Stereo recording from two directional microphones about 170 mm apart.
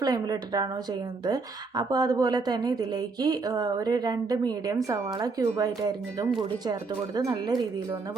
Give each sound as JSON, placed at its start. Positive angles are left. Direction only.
{"t": 0.0, "sound": "speech", "side_deg": -20}